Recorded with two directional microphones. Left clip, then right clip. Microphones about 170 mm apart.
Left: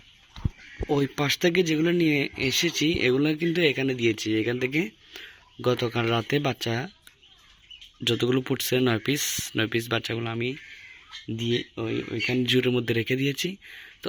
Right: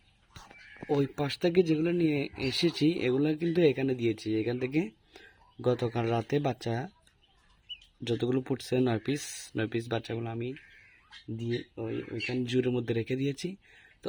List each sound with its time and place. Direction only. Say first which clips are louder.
0.9 s speech: left 5 dB; centre (ahead or behind)
8.0 s speech: left 6 dB; 5° right (ahead or behind)
11.7 s speech: left 6 dB; 10° left (ahead or behind)
12.4 s speech: left 6 dB; centre (ahead or behind)